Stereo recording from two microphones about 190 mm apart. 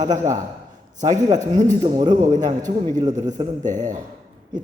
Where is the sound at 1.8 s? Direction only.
20° right (ahead or behind).